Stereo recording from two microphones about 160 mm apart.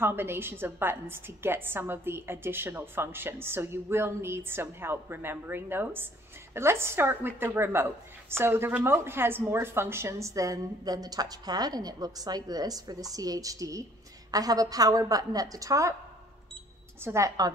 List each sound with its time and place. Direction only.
0.0 s a woman's voice: 15° right (ahead or behind)
17.0 s a woman's voice: 20° right (ahead or behind)